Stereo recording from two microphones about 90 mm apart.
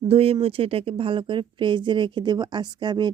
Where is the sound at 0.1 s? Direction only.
90° right.